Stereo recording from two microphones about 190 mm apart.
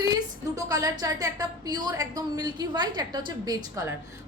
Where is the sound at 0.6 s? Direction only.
20° right (ahead or behind).